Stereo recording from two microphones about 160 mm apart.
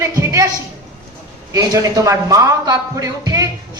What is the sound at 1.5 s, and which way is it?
Speech, 20° right (ahead or behind).